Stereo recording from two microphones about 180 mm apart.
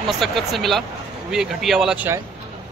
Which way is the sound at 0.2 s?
Centre (ahead or behind).